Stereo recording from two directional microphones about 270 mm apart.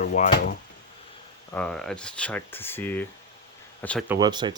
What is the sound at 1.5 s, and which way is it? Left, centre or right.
Speech, centre.